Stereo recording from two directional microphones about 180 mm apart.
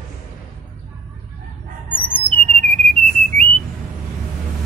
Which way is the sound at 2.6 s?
40° right (ahead or behind).